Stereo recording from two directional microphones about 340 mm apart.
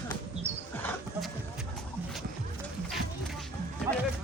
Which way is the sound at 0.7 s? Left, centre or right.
Centre.